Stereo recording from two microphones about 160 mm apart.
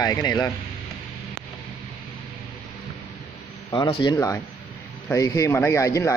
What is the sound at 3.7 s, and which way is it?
Speech, 30° left (ahead or behind).